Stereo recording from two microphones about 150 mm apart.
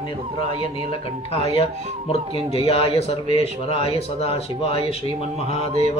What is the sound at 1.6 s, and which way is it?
Speech, 40° left (ahead or behind).